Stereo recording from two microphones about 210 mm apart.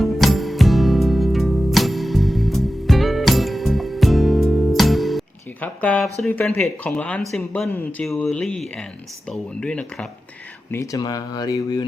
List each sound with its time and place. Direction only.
0.0 s music: centre (ahead or behind)
6.2 s speech: 10° left (ahead or behind)
10.7 s speech: 15° left (ahead or behind)